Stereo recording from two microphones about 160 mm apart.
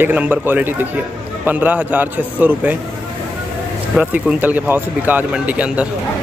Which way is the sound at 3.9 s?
10° right (ahead or behind).